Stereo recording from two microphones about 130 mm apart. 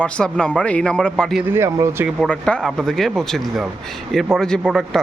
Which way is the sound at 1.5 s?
20° right (ahead or behind).